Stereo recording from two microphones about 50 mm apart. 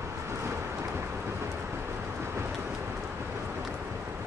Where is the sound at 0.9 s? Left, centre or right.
Right.